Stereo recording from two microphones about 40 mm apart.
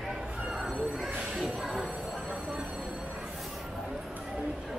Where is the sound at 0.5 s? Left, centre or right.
Centre.